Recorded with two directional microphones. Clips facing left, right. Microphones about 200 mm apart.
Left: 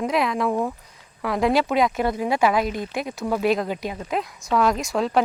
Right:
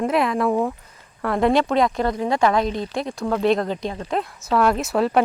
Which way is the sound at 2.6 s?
30° right (ahead or behind).